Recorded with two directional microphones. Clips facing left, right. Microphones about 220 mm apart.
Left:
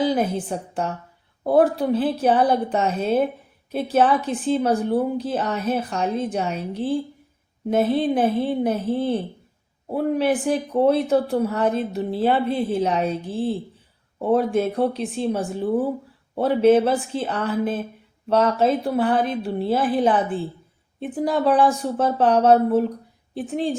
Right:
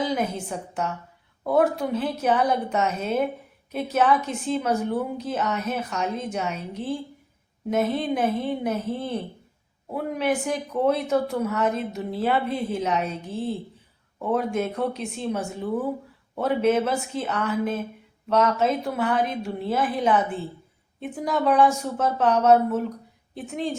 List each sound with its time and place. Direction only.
0.0 s speech: 35° left (ahead or behind)